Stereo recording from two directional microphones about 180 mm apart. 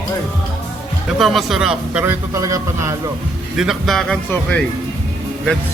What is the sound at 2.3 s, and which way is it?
Speech, 15° right (ahead or behind).